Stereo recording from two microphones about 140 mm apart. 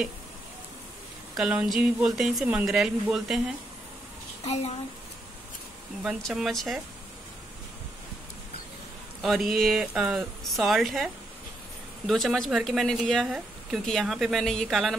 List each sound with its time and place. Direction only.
1.3 s speech: 5° right (ahead or behind)
4.5 s speech: 50° left (ahead or behind)
6.0 s speech: centre (ahead or behind)
9.2 s speech: centre (ahead or behind)
12.1 s speech: centre (ahead or behind)